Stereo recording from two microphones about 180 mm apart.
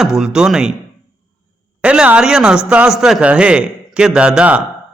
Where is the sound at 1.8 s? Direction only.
5° right (ahead or behind).